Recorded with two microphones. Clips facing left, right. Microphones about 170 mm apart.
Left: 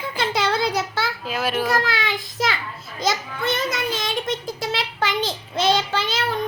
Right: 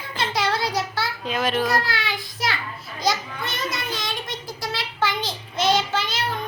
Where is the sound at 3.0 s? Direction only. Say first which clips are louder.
Left 1 dB; 25° left (ahead or behind).